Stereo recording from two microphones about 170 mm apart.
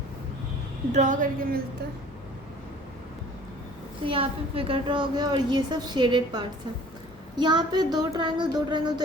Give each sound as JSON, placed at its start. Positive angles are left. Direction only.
{"t": 0.9, "sound": "speech", "side_deg": -50}
{"t": 4.0, "sound": "a woman's voice", "side_deg": -30}